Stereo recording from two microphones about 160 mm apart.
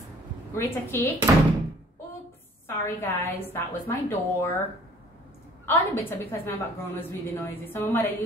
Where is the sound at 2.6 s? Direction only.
15° left (ahead or behind).